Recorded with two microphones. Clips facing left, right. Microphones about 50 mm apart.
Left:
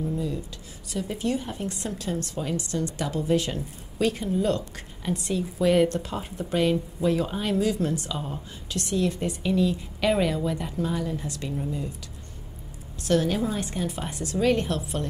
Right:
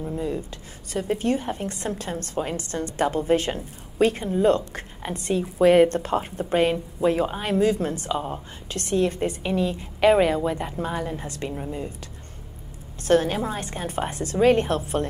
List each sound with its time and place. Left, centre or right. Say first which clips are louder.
0.0 s a sound: right 1 dB; right
0.9 s a woman's voice: right 4 dB; right
13.0 s a woman's voice: right 3 dB; right